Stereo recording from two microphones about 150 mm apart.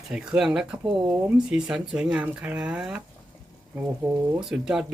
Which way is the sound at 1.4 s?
5° right (ahead or behind).